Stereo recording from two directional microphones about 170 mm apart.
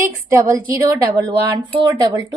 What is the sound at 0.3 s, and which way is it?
Speech, 15° right (ahead or behind).